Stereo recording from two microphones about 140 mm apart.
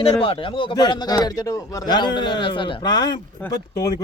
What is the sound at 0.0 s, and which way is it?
A man's voice, 40° left (ahead or behind).